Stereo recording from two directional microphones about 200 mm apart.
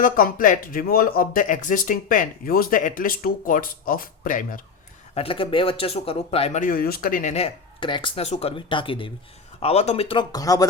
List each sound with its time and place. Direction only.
0.0 s speech: 45° left (ahead or behind)
5.1 s speech: 25° left (ahead or behind)